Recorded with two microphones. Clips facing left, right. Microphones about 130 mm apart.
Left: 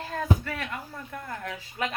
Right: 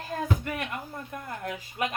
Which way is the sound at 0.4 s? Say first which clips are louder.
Right 1 dB; 15° right (ahead or behind).